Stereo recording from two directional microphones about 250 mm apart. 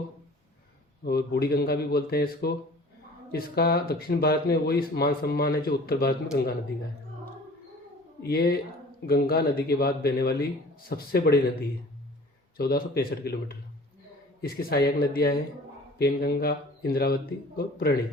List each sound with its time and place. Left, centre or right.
1.0 s speech: left
8.2 s speech: left
12.5 s speech: left